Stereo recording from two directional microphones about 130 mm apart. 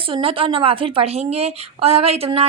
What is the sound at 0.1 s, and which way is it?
A woman's voice, 45° right (ahead or behind).